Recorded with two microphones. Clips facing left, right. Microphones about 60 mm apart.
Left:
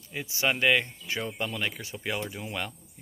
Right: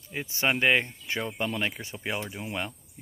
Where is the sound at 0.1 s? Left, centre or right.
Right.